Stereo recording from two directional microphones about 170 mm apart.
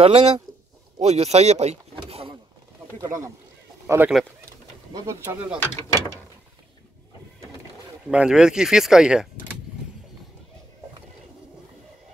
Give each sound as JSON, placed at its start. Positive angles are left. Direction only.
{"t": 0.0, "sound": "speech", "side_deg": -35}
{"t": 0.9, "sound": "vehicle", "side_deg": -40}
{"t": 3.0, "sound": "speech", "side_deg": -20}
{"t": 5.6, "sound": "mechanisms", "side_deg": 15}
{"t": 8.1, "sound": "speech", "side_deg": -5}